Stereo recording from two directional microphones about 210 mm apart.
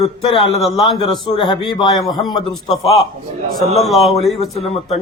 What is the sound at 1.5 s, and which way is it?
Speech, 20° left (ahead or behind).